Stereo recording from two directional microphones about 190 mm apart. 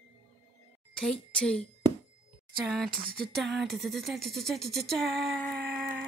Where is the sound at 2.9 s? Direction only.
50° right (ahead or behind).